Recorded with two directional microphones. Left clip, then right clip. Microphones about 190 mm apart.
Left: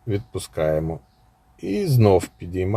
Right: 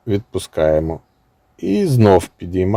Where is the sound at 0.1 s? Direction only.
50° right (ahead or behind).